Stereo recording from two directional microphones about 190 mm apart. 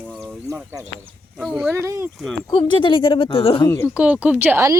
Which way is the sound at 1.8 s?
15° right (ahead or behind).